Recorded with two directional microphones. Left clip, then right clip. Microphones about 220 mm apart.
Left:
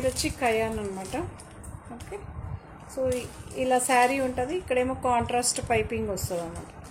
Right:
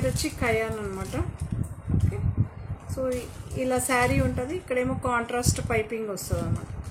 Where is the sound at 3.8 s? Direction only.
10° right (ahead or behind).